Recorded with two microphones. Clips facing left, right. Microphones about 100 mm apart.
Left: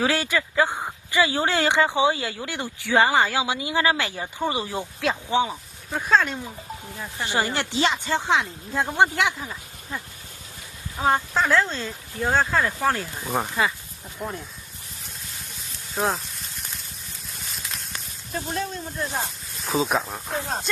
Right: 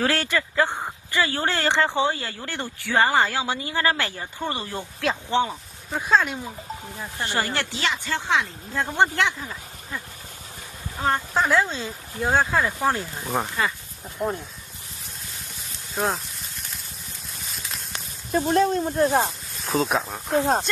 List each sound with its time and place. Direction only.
0.0 s speech: 10° left (ahead or behind)
5.9 s speech: 5° right (ahead or behind)
7.2 s speech: 20° left (ahead or behind)
11.0 s speech: 5° left (ahead or behind)
11.3 s speech: 10° right (ahead or behind)
13.0 s speech: centre (ahead or behind)
15.9 s a sound: centre (ahead or behind)
18.3 s speech: 50° right (ahead or behind)
19.6 s speech: centre (ahead or behind)